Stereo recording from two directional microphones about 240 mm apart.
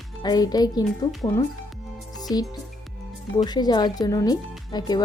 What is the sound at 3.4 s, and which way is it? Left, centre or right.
Speech, centre.